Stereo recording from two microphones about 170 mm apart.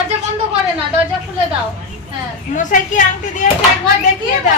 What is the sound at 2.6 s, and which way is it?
Speech, 50° left (ahead or behind).